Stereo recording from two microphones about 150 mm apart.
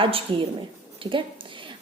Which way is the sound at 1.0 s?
35° right (ahead or behind).